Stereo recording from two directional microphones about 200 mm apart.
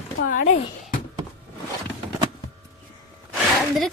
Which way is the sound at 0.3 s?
40° left (ahead or behind).